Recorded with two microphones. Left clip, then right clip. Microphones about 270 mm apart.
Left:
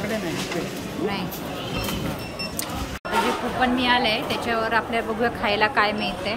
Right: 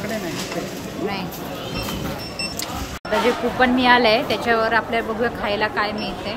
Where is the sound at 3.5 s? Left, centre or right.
Centre.